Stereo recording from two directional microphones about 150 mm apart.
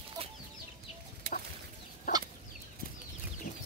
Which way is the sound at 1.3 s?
80° right.